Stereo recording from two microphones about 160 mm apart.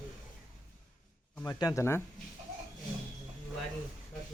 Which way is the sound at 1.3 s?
20° left (ahead or behind).